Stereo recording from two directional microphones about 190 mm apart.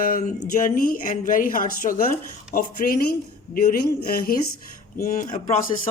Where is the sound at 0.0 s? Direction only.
45° left (ahead or behind).